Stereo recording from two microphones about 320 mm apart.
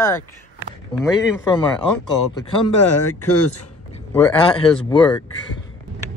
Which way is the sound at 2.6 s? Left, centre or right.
Left.